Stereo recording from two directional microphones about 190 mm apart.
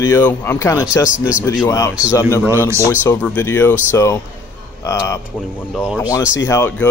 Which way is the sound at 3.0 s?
10° left (ahead or behind).